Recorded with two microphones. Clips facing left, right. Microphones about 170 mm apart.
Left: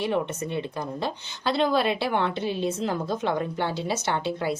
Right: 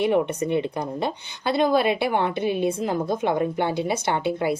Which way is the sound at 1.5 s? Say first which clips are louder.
Right 3 dB; 50° right (ahead or behind).